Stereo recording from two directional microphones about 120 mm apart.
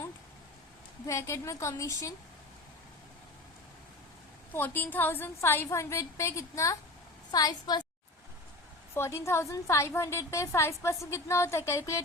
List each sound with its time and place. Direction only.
1.0 s a woman's voice: 25° left (ahead or behind)
4.5 s a woman's voice: 15° left (ahead or behind); by 7.9 s 35° left (ahead or behind)
9.0 s a woman's voice: 20° left (ahead or behind)